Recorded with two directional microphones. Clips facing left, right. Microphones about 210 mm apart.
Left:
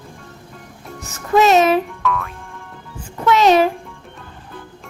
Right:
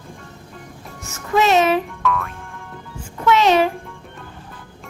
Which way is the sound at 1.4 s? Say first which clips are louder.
Left 2 dB; 40° left (ahead or behind).